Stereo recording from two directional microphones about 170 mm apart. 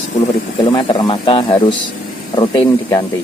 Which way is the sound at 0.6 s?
25° left (ahead or behind).